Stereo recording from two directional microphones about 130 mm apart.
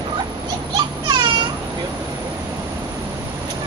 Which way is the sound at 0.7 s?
35° right (ahead or behind).